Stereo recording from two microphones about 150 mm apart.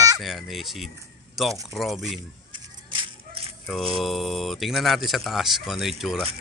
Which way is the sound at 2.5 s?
35° right (ahead or behind).